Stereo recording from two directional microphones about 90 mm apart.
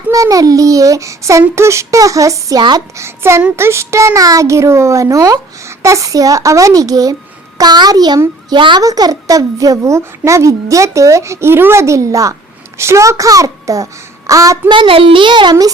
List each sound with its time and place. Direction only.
0.1 s a child's voice: 40° right (ahead or behind)
8.4 s a child's voice: 60° right (ahead or behind)
8.8 s a child's voice: 45° right (ahead or behind)
14.7 s a child's voice: 80° right; by 15.5 s 60° right (ahead or behind)